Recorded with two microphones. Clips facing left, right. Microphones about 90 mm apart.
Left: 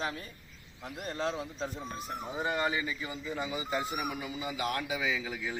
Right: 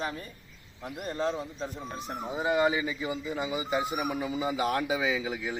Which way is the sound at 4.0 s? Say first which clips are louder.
Right 5 dB; 25° right (ahead or behind).